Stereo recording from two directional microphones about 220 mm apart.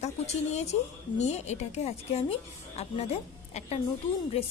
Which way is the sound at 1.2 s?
30° left (ahead or behind).